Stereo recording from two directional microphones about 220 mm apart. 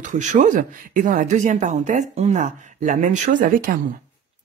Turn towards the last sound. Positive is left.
turn(degrees=-40)  # may be behind; listen again after turning